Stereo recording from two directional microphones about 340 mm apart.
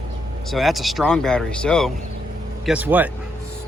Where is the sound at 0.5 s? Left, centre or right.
Centre.